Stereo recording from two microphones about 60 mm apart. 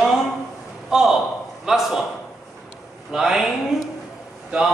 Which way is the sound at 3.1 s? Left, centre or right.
Centre.